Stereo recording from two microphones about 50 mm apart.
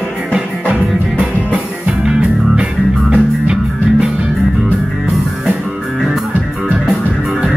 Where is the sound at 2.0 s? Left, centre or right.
Right.